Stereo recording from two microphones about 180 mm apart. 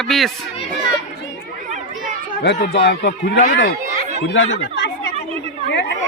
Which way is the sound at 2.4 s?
75° left (ahead or behind).